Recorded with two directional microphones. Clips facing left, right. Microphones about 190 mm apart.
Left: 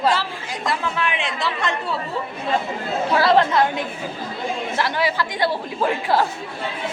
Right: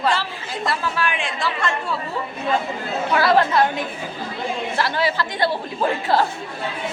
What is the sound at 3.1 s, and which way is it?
Speech, 25° left (ahead or behind).